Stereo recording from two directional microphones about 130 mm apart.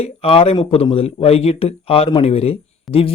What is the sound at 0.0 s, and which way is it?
Speech, 50° left (ahead or behind).